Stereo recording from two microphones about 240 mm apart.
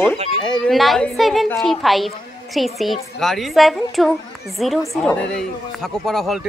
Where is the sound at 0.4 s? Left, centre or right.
Centre.